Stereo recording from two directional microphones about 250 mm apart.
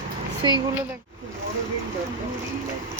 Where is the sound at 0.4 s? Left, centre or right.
Centre.